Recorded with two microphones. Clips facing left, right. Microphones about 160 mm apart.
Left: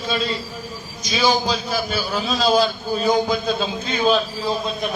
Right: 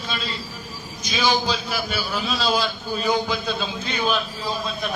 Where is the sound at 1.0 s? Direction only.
40° left (ahead or behind).